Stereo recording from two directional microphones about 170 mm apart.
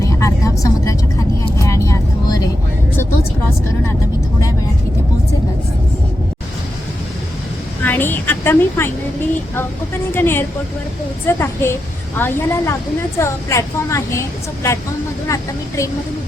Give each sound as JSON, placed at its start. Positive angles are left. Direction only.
{"t": 0.0, "sound": "vehicle", "side_deg": 20}
{"t": 7.9, "sound": "a sound", "side_deg": 10}
{"t": 10.2, "sound": "speech", "side_deg": 15}